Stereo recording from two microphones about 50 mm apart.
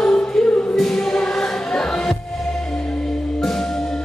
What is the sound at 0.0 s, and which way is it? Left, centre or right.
Music, centre.